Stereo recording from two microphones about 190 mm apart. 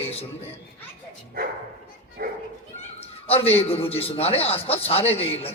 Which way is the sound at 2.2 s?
50° right (ahead or behind).